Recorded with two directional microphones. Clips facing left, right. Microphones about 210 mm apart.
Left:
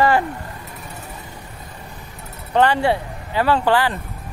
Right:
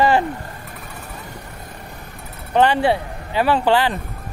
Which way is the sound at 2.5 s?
20° right (ahead or behind).